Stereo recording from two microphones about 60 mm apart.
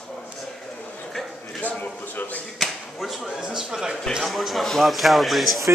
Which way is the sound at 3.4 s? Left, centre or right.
Centre.